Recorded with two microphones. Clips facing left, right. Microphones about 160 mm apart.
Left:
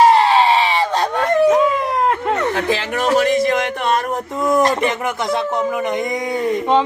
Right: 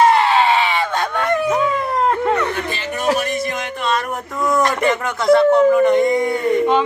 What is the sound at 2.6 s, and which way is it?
A man's voice, 90° left.